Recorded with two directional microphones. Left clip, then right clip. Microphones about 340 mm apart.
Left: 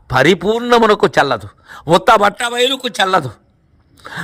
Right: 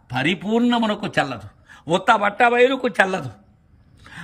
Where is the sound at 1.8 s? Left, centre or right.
Centre.